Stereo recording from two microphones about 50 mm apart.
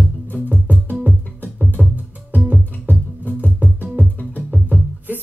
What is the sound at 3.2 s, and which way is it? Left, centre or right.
Music, left.